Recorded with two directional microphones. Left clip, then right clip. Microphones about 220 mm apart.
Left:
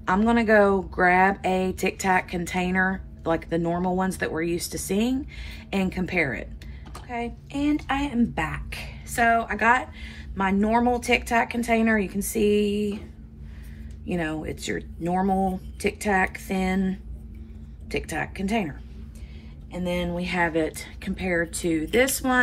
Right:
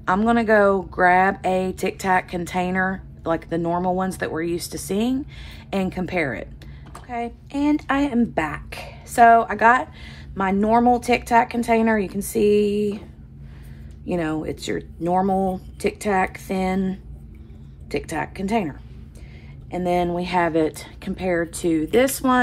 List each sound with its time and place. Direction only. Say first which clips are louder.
0.0 s speech: right 3 dB; 10° right (ahead or behind)
14.0 s speech: right 4 dB; 15° right (ahead or behind)
20.0 s speech: right 3 dB; 20° right (ahead or behind)